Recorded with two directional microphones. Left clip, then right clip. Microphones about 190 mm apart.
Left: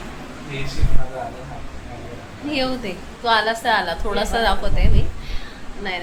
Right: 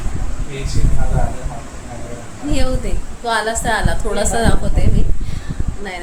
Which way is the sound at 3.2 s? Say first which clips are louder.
Even; 20° right (ahead or behind).